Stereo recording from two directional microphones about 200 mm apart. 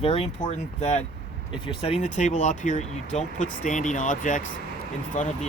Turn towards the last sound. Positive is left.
turn(degrees=40)  # may be behind; listen again after turning